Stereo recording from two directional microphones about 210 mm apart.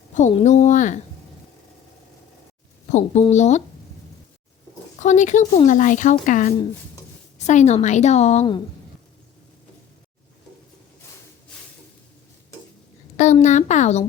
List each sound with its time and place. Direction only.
0.1 s speech: 35° left (ahead or behind)
2.9 s speech: 30° left (ahead or behind)
4.9 s speech: 35° left (ahead or behind)
13.1 s speech: 35° left (ahead or behind)